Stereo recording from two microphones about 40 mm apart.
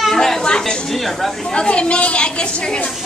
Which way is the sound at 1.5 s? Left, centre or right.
Left.